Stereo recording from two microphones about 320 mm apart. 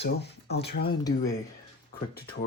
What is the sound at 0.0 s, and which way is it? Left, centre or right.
Speech, left.